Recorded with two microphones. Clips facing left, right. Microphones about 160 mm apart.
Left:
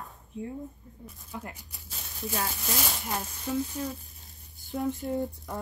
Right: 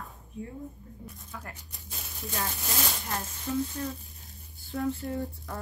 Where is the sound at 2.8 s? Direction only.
10° left (ahead or behind).